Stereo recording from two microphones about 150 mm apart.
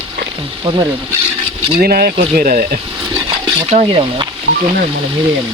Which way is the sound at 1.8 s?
85° right.